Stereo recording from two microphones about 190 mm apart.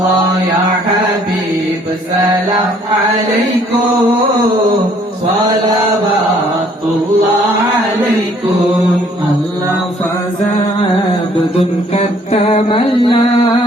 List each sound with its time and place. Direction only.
11.9 s mantra: 30° left (ahead or behind)